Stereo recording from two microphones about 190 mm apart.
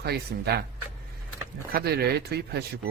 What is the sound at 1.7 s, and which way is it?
Speech, 55° right (ahead or behind).